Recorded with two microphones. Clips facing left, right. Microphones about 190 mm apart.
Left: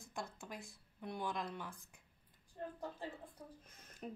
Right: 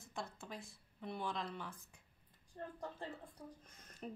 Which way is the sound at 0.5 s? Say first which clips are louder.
Even; 15° left (ahead or behind).